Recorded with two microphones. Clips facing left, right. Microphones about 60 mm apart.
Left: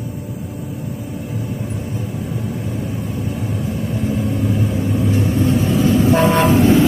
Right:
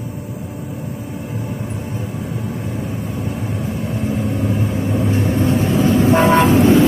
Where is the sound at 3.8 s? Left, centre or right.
Right.